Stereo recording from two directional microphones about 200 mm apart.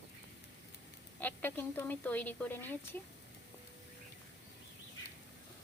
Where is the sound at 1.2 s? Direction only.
10° left (ahead or behind).